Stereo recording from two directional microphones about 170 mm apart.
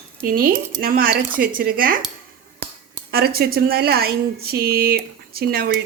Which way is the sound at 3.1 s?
65° right (ahead or behind).